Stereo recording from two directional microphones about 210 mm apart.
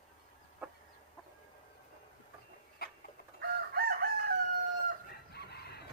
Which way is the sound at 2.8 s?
45° left (ahead or behind).